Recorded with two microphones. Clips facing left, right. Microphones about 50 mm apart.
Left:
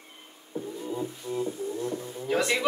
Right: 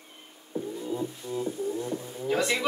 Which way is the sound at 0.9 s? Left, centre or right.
Centre.